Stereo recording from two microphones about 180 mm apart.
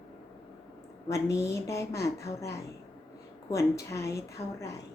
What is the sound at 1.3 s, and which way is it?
Speech, 15° left (ahead or behind).